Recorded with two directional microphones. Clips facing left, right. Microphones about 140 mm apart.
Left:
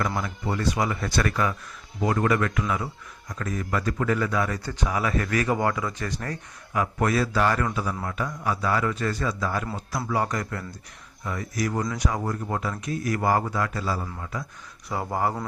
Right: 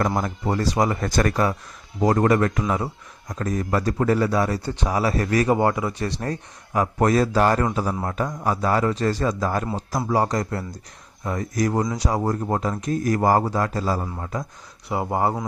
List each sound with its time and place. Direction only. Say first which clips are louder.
0.2 s speech: right 4 dB; 40° right (ahead or behind)
14.8 s speech: right 4 dB; 25° right (ahead or behind)